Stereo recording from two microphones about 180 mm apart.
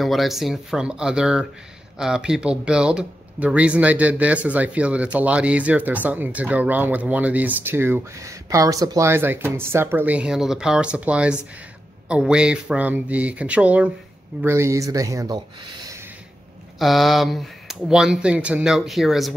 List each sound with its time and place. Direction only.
0.0 s speech: centre (ahead or behind); by 16.0 s 25° right (ahead or behind)
16.7 s speech: centre (ahead or behind)